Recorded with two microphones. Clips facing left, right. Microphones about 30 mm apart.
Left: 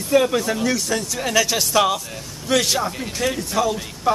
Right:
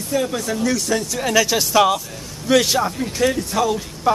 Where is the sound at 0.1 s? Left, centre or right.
Left.